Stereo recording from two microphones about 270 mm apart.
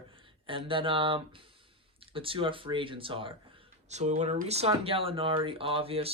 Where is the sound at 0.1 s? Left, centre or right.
Centre.